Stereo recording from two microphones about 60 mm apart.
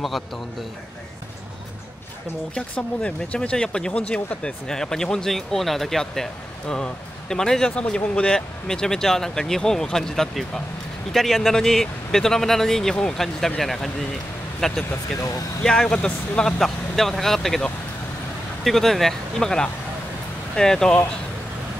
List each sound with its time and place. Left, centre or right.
0.0 s speech: centre
2.7 s speech: centre
15.1 s speech: left
15.6 s speech: centre